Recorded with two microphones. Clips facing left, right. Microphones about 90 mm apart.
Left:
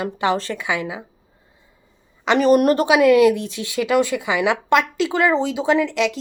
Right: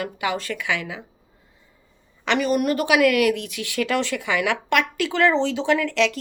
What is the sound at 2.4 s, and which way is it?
Speech, 40° left (ahead or behind).